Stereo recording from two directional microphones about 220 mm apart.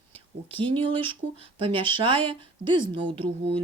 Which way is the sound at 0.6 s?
25° right (ahead or behind).